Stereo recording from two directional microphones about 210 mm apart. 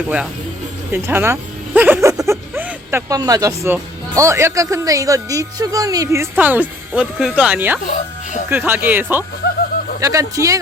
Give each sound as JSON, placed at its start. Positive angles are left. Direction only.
{"t": 0.9, "sound": "speech", "side_deg": -10}
{"t": 7.9, "sound": "speech", "side_deg": 35}
{"t": 8.4, "sound": "speech", "side_deg": -10}